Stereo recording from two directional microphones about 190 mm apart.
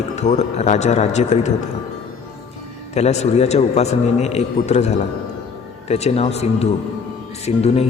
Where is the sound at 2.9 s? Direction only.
35° left (ahead or behind).